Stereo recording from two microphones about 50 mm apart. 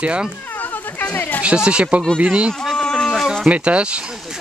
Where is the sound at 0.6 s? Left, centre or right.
Left.